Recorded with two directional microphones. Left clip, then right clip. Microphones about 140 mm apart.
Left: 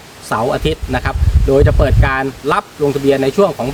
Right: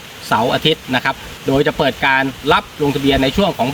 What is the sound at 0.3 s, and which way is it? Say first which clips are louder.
Speech: right 1 dB; 10° left (ahead or behind).